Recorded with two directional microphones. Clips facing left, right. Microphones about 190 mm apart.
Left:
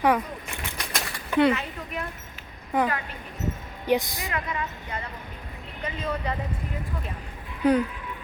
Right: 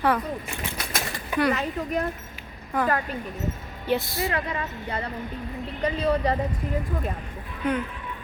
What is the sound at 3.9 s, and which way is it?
Speech, 15° left (ahead or behind).